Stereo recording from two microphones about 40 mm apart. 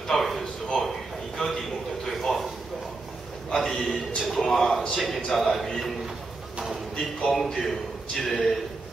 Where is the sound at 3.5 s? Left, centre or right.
Centre.